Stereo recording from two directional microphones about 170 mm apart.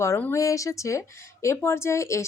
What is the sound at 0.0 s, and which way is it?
Speech, 15° left (ahead or behind).